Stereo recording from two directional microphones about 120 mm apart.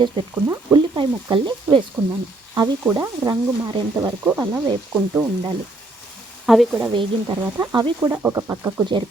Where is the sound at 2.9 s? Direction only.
30° right (ahead or behind).